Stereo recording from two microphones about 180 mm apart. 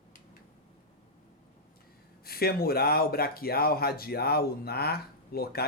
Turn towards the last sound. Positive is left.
turn(degrees=60)  # may be behind; listen again after turning